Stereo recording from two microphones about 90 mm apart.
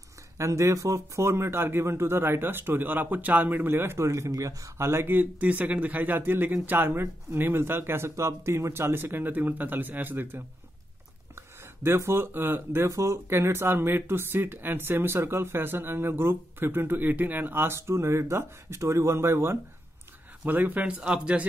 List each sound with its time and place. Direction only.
0.4 s speech: 35° right (ahead or behind); by 21.5 s 10° right (ahead or behind)